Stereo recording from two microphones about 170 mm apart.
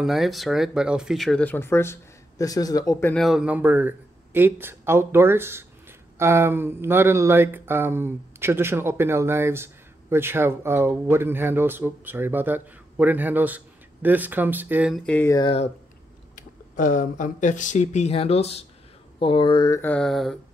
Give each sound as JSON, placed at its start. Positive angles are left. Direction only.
{"t": 0.0, "sound": "speech", "side_deg": 0}
{"t": 3.2, "sound": "speech", "side_deg": -5}
{"t": 15.0, "sound": "speech", "side_deg": 10}
{"t": 15.3, "sound": "speech", "side_deg": 30}
{"t": 16.3, "sound": "speech", "side_deg": 50}
{"t": 19.8, "sound": "mantra", "side_deg": 5}